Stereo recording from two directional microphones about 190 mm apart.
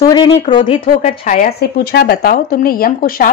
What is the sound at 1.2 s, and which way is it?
Speech, 40° left (ahead or behind).